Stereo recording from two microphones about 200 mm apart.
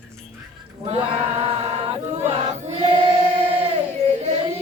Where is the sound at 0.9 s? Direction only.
30° right (ahead or behind).